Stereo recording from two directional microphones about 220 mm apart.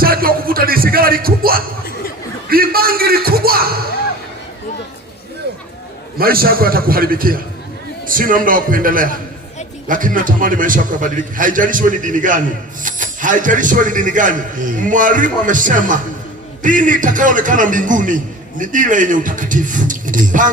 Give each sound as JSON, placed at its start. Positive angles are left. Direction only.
{"t": 0.0, "sound": "music", "side_deg": -40}
{"t": 2.5, "sound": "speech", "side_deg": -40}
{"t": 6.1, "sound": "a man's voice", "side_deg": -45}